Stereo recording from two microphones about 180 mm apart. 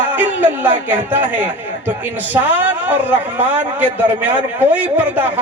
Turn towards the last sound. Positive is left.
turn(degrees=-10)  # may be behind; listen again after turning